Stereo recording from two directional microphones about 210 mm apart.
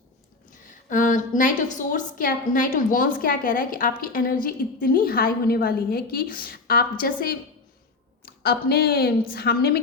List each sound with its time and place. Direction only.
0.9 s a woman's voice: 40° left (ahead or behind)